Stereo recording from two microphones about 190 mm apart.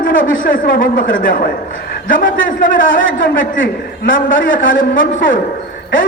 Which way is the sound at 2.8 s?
85° left.